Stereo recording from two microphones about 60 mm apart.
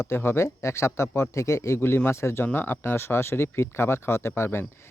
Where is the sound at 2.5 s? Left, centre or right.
Left.